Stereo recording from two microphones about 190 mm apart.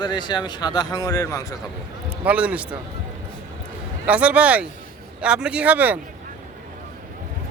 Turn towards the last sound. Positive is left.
turn(degrees=-10)  # may be behind; listen again after turning